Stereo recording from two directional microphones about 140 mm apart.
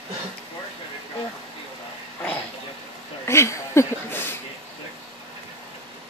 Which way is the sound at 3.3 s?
20° left (ahead or behind).